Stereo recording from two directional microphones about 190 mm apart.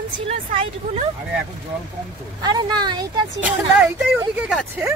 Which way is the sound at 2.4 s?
20° right (ahead or behind).